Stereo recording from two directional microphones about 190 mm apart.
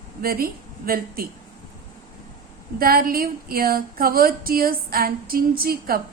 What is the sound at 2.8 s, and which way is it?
A woman's voice, 50° right (ahead or behind).